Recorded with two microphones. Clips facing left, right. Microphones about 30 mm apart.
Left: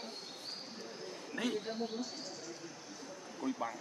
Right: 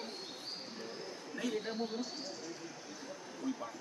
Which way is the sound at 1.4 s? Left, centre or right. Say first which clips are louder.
Left 2 dB; left.